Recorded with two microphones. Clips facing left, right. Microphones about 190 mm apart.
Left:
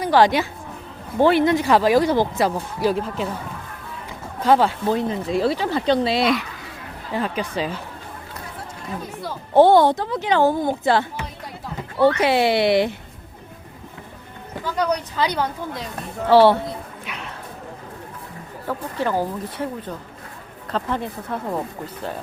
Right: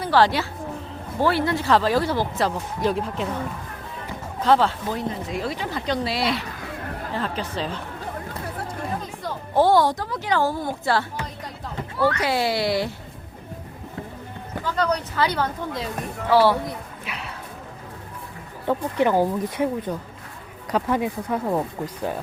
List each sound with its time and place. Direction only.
0.0 s a woman's voice: 15° left (ahead or behind)
2.8 s speech: centre (ahead or behind)
4.4 s speech: 10° left (ahead or behind)
4.9 s speech: 30° left (ahead or behind); by 7.8 s 10° left (ahead or behind)
9.6 s speech: 25° left (ahead or behind)
14.6 s speech: 10° left (ahead or behind)
17.1 s clip-clop: 5° right (ahead or behind)
18.7 s speech: 15° right (ahead or behind)